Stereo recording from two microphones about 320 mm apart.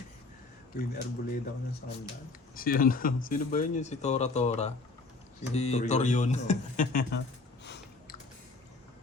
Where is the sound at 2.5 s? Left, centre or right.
Left.